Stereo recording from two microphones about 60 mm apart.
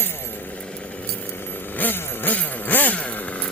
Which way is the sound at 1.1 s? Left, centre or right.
Left.